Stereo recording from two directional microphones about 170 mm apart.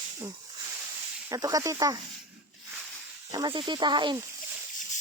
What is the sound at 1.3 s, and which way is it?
Speech, 20° right (ahead or behind).